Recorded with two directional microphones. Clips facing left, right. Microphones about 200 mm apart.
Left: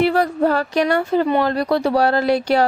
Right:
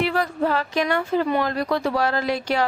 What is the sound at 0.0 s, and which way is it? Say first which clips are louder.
A woman's voice: left 6 dB; 35° left (ahead or behind).